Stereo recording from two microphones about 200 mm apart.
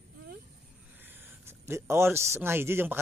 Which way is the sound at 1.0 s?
10° right (ahead or behind).